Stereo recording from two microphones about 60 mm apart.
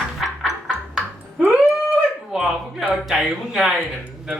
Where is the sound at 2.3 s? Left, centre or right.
Centre.